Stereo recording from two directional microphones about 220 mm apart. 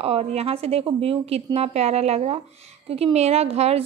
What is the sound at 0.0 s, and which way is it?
A woman's voice, 30° right (ahead or behind).